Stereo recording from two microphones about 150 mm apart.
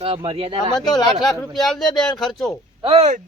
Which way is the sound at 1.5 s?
Centre (ahead or behind).